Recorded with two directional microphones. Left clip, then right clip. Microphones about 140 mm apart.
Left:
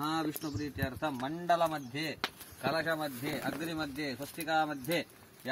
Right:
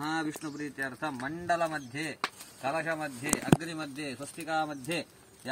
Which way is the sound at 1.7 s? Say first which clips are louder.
Right 1 dB; 5° left (ahead or behind).